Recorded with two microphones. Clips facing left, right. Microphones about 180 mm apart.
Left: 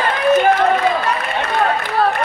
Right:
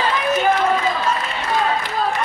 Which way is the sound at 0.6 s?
60° left (ahead or behind).